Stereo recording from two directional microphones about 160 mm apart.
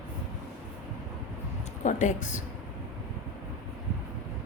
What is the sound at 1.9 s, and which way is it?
Speech, 50° left (ahead or behind).